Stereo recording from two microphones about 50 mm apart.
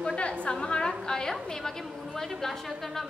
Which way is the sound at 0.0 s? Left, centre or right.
Left.